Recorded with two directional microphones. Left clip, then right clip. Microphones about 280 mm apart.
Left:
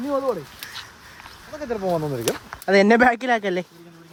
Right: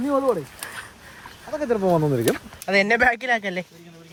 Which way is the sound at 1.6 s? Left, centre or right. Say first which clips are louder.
Right 4 dB; right.